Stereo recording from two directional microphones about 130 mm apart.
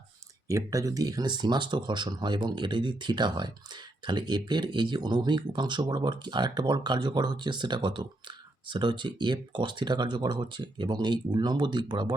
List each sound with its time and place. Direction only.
0.4 s speech: 25° right (ahead or behind)